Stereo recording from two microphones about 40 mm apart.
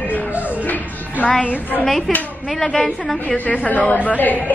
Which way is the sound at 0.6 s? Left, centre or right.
Left.